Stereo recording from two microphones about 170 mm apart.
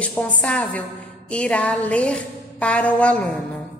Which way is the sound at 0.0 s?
5° left (ahead or behind).